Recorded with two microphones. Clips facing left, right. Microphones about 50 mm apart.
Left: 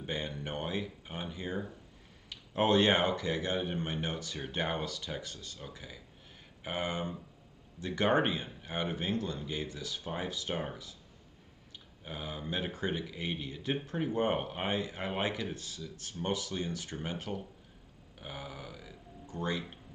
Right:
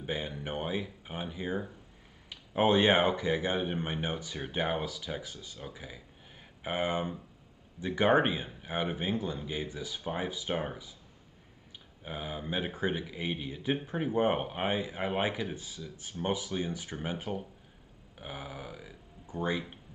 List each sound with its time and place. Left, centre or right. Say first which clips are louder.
0.0 s speech: right 2 dB; centre
12.0 s speech: right 2 dB; centre